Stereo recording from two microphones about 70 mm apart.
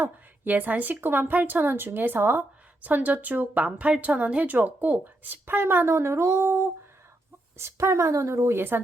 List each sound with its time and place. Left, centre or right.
0.0 s a woman's voice: right